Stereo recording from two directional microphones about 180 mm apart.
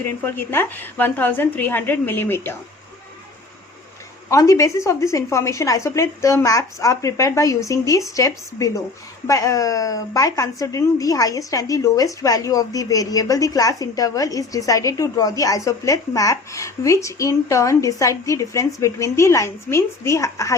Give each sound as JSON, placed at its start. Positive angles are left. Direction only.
{"t": 0.3, "sound": "a woman's voice", "side_deg": 10}
{"t": 4.3, "sound": "a woman's voice", "side_deg": 15}